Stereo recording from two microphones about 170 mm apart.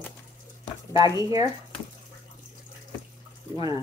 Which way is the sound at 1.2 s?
20° right (ahead or behind).